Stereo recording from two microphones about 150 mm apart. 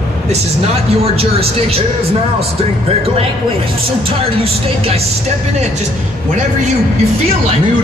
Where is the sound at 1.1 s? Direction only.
40° right (ahead or behind).